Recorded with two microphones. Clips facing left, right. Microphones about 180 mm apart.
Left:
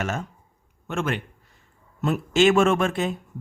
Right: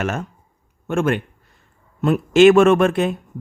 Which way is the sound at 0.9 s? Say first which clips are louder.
Right 7 dB; 50° right (ahead or behind).